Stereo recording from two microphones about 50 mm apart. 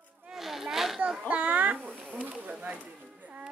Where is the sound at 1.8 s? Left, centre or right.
Centre.